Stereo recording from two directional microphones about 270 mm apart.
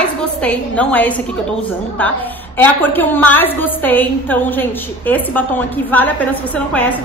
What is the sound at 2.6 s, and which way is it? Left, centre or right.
A woman's voice, centre.